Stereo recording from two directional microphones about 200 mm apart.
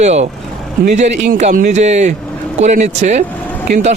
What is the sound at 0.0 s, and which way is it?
Speech, 35° right (ahead or behind).